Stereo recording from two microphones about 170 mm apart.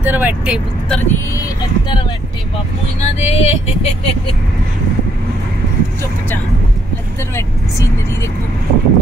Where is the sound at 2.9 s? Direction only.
40° left (ahead or behind).